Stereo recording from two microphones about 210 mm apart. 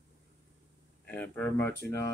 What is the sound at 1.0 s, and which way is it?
Speech, 5° left (ahead or behind).